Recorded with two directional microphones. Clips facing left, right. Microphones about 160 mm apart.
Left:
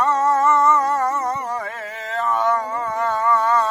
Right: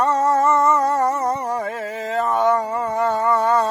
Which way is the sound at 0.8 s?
35° right (ahead or behind).